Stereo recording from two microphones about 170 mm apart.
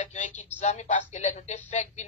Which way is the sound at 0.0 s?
45° left (ahead or behind).